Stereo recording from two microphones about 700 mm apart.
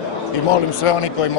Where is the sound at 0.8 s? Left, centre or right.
Left.